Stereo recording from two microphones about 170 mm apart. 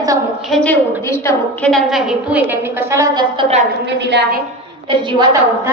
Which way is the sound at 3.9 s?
90° right.